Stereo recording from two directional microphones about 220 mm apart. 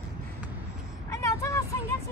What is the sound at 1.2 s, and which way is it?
Vehicle, 15° left (ahead or behind).